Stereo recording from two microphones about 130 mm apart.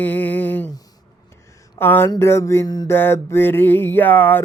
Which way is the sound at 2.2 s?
20° left (ahead or behind).